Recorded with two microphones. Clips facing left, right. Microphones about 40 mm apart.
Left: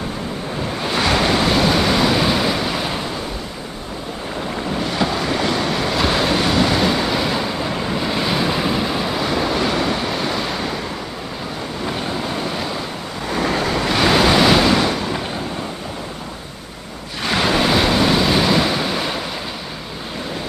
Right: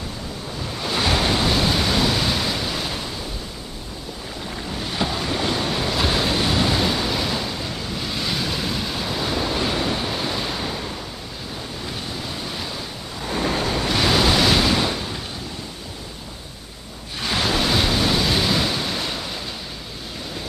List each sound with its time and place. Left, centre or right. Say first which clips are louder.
0.9 s waves: left 4 dB; left
1.7 s waves: left 5 dB; left
5.2 s waves: left 4 dB; left
5.9 s waves: left 4 dB; left
6.4 s a sound: left 4 dB; left
6.7 s waves: left 4 dB; left
9.3 s waves: left 4 dB; left
13.3 s waves: left 3 dB; left
13.9 s waves: left 4 dB; left
14.4 s waves: left 5 dB; centre
14.8 s a sound: left 5 dB; left
17.2 s waves: left 4 dB; left